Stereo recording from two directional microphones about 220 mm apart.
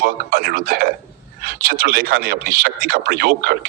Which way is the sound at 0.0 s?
40° right (ahead or behind).